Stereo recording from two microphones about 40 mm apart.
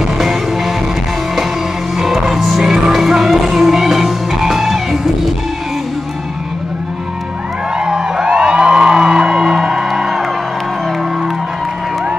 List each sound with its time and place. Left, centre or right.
0.2 s music: centre
2.0 s music: centre
7.8 s music: centre